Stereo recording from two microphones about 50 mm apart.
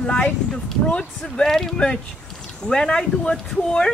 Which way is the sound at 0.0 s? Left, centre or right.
Left.